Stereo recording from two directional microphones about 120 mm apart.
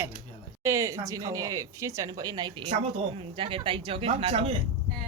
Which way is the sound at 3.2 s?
50° right (ahead or behind).